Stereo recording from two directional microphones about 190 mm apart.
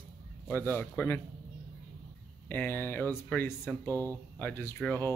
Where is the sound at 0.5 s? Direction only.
10° left (ahead or behind).